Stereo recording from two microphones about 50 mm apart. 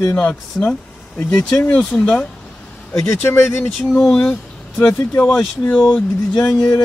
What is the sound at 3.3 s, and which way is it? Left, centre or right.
Speech, left.